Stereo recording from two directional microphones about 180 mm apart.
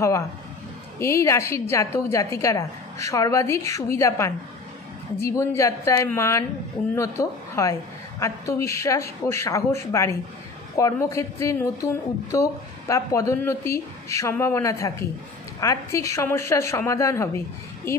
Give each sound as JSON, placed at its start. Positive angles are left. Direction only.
{"t": 0.9, "sound": "a woman's voice", "side_deg": 15}